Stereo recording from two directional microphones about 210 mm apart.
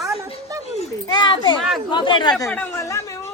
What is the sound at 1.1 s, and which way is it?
A child's voice, 20° left (ahead or behind).